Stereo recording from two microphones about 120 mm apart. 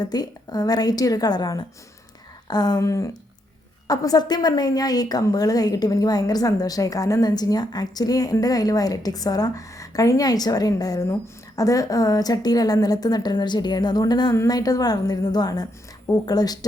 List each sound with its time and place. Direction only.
0.0 s a woman's voice: 35° left (ahead or behind)